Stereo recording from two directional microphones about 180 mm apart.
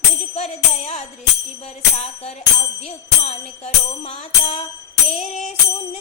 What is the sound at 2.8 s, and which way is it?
Music, 35° left (ahead or behind).